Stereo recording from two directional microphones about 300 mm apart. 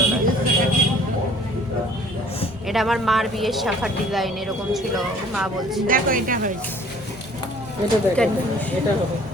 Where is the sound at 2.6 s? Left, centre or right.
Centre.